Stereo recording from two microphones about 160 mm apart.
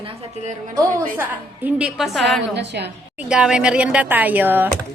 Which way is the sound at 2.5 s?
90° right.